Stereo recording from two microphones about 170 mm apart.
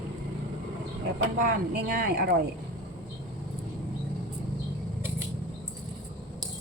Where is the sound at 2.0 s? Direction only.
65° right (ahead or behind).